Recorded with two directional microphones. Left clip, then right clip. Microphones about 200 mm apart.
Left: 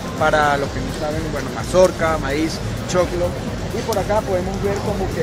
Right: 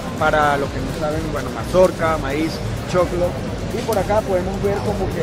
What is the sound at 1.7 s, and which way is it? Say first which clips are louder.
Speech: even; 10° left (ahead or behind).